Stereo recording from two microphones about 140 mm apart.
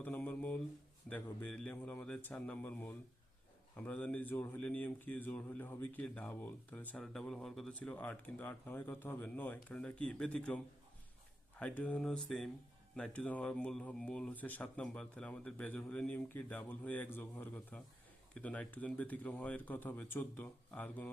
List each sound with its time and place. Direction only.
0.0 s mantra: 10° left (ahead or behind)
1.1 s speech: 10° left (ahead or behind)